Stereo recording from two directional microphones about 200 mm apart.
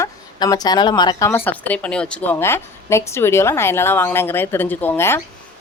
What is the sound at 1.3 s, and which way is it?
Speech, 10° left (ahead or behind).